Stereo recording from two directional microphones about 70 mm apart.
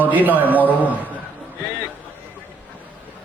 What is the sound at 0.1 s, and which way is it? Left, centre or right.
Speech, right.